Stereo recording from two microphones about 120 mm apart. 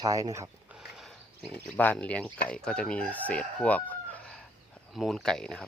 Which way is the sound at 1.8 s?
10° left (ahead or behind).